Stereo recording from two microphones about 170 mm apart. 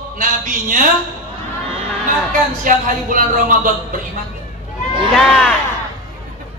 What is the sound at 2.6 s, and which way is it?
A woman's voice, 50° right (ahead or behind).